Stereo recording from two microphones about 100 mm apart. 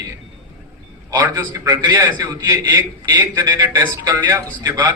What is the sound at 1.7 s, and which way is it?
A man's voice, 40° right (ahead or behind).